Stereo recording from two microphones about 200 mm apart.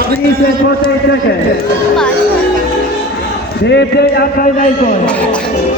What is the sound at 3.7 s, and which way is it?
A man's voice, 55° left (ahead or behind).